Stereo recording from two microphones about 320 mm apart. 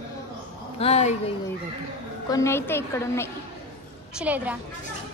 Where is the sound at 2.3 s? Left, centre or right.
Centre.